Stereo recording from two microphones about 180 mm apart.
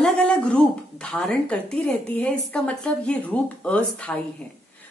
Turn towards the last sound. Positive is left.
turn(degrees=5)  # may be behind; listen again after turning